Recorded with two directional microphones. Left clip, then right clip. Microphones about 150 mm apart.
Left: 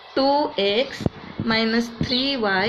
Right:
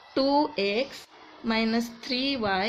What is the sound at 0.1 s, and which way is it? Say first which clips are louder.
A woman's voice: left 4 dB; 90° right.